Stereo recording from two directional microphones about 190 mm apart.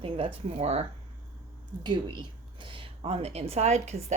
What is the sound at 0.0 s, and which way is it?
A woman's voice, 30° right (ahead or behind).